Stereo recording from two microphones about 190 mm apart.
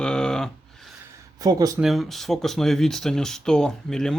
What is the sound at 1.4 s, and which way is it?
Speech, 20° right (ahead or behind).